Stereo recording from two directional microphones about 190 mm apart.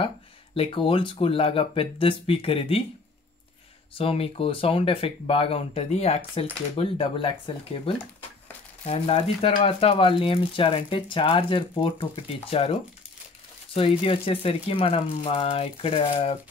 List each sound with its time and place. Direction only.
0.6 s speech: 25° left (ahead or behind)
3.9 s speech: 30° left (ahead or behind)
13.7 s speech: 30° left (ahead or behind)